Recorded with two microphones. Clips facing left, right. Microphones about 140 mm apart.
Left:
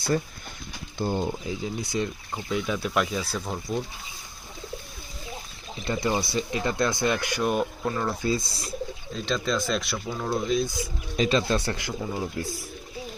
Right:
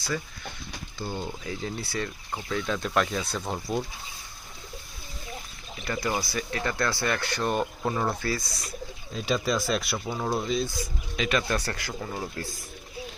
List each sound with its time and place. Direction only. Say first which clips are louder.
0.9 s speech: left 7 dB; 45° left (ahead or behind)
1.2 s speech: left 4 dB; 25° left (ahead or behind); by 3.8 s 5° right (ahead or behind)
5.8 s speech: left 3 dB; 20° left (ahead or behind); by 7.7 s 5° left (ahead or behind)
7.8 s speech: even; 5° right (ahead or behind)
8.2 s speech: left 4 dB; 25° left (ahead or behind)
9.1 s speech: right 1 dB; 10° right (ahead or behind)
10.1 s speech: left 2 dB; 15° right (ahead or behind)
11.2 s speech: left 4 dB; 30° left (ahead or behind)
12.0 s speech: left 4 dB; 5° left (ahead or behind)